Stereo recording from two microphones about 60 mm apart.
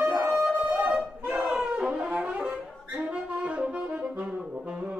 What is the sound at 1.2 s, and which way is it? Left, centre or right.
Music, right.